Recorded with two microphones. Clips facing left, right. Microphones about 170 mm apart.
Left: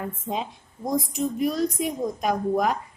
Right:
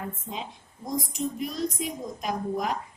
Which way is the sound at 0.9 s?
65° left (ahead or behind).